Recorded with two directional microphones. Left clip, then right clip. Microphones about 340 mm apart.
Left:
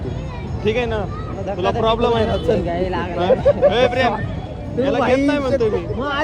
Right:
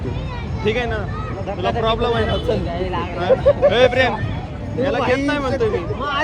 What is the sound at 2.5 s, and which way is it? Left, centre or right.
Speech, left.